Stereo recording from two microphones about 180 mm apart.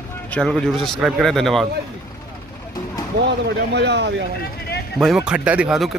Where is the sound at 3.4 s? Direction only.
70° right (ahead or behind).